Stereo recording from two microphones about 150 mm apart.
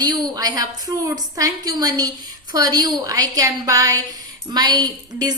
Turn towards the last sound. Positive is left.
turn(degrees=-25)  # may be behind; listen again after turning